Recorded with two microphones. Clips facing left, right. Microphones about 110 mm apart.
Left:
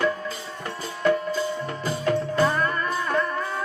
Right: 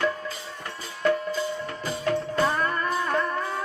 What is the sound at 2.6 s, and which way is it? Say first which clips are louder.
Music: left 1 dB; 30° right (ahead or behind).